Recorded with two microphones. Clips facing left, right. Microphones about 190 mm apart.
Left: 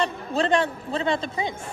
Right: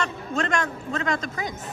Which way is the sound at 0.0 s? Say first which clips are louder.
Left 3 dB; 35° left (ahead or behind).